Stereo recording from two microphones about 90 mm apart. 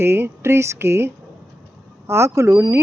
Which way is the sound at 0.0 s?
25° right (ahead or behind).